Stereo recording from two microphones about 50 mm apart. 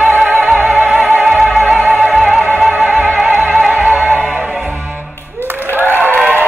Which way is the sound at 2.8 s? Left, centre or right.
Right.